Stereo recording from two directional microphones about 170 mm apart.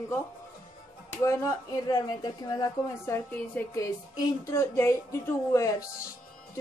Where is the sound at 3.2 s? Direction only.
10° left (ahead or behind).